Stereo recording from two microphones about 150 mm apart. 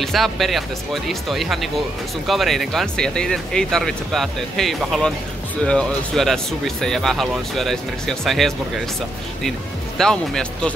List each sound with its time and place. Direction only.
0.0 s speech: centre (ahead or behind)
9.9 s speech: 5° left (ahead or behind)